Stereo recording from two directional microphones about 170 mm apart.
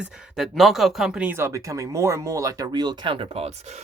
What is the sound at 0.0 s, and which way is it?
Speech, centre (ahead or behind).